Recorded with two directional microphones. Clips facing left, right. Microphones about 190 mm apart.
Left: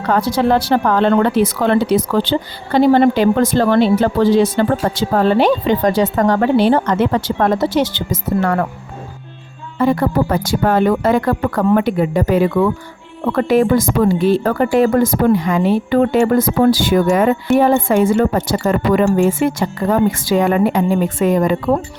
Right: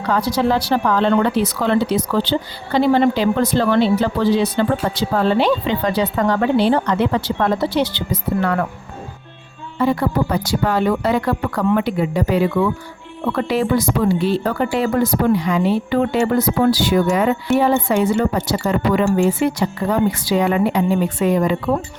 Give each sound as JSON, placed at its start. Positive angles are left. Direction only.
{"t": 0.1, "sound": "speech", "side_deg": 50}
{"t": 9.7, "sound": "speech", "side_deg": 50}